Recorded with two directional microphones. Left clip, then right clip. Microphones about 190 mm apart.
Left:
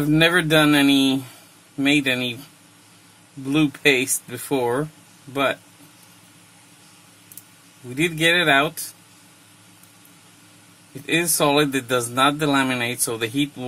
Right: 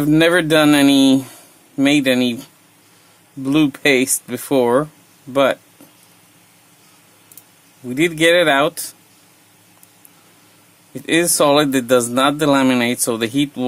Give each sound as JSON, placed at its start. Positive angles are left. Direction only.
{"t": 0.0, "sound": "a man's voice", "side_deg": -45}
{"t": 3.4, "sound": "a man's voice", "side_deg": -45}
{"t": 7.9, "sound": "a man's voice", "side_deg": -50}
{"t": 11.1, "sound": "a man's voice", "side_deg": -50}